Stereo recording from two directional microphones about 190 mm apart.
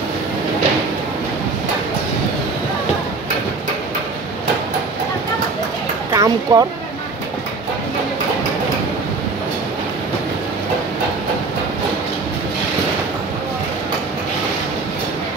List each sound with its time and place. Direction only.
6.1 s speech: 20° right (ahead or behind)